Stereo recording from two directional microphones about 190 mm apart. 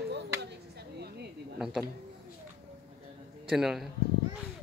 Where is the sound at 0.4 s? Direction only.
60° right (ahead or behind).